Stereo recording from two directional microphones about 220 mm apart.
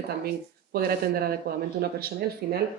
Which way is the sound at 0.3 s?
45° right (ahead or behind).